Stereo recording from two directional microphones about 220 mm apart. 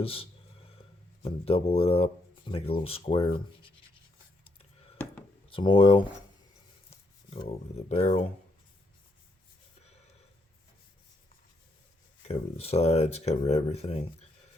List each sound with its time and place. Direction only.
0.0 s speech: 25° left (ahead or behind)
5.5 s speech: 25° left (ahead or behind)
7.3 s speech: 30° left (ahead or behind)
12.3 s speech: 30° left (ahead or behind)